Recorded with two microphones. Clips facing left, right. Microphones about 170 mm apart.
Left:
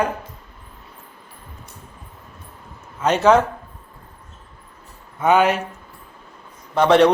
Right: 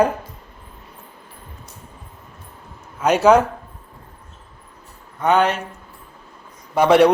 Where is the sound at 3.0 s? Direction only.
10° right (ahead or behind).